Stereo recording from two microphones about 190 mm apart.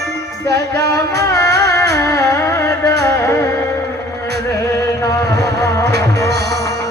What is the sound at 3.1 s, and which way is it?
Music, 15° left (ahead or behind).